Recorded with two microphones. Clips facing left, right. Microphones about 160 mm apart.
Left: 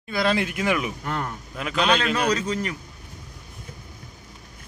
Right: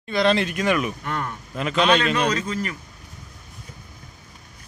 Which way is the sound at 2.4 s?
25° left (ahead or behind).